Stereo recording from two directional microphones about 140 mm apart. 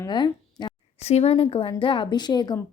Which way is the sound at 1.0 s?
50° left (ahead or behind).